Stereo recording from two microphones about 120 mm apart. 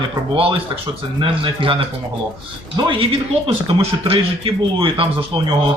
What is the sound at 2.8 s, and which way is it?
A man's voice, 50° right (ahead or behind).